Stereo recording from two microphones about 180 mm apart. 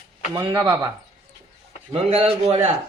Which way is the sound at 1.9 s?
30° right (ahead or behind).